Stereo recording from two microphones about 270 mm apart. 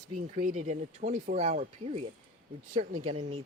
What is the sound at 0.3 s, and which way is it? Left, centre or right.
Speech, right.